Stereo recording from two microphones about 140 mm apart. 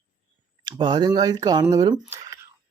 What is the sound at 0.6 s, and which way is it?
Speech, 35° right (ahead or behind).